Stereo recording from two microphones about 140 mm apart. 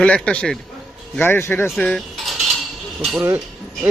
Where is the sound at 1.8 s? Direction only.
5° left (ahead or behind).